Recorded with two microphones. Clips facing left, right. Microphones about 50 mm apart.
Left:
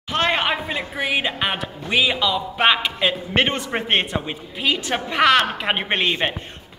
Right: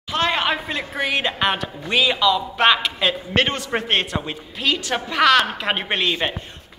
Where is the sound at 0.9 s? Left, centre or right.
Centre.